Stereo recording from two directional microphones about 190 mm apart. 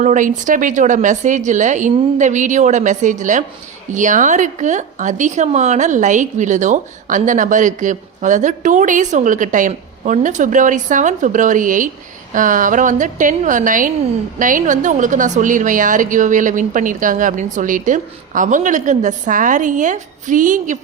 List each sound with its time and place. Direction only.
0.0 s a woman's voice: 40° right (ahead or behind)